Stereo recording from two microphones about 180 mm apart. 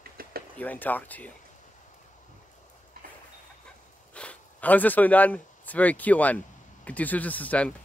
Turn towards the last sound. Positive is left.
turn(degrees=10)  # may be behind; listen again after turning